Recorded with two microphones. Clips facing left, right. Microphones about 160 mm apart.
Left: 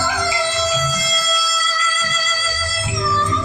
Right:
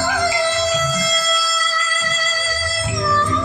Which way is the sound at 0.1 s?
55° right (ahead or behind).